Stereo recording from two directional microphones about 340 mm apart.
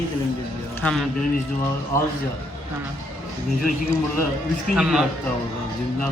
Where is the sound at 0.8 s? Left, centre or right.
Centre.